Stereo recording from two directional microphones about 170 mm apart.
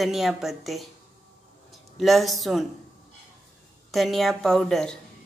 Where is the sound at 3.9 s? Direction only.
Centre (ahead or behind).